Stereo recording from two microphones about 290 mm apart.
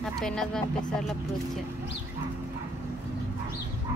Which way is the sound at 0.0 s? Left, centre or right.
Centre.